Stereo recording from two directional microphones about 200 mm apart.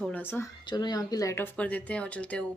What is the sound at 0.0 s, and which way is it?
Speech, 10° left (ahead or behind).